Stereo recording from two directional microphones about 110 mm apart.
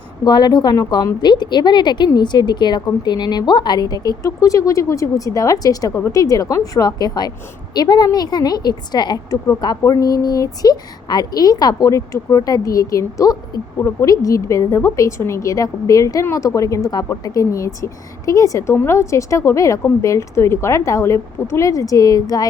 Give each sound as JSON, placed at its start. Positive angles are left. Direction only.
{"t": 0.3, "sound": "a woman's voice", "side_deg": 40}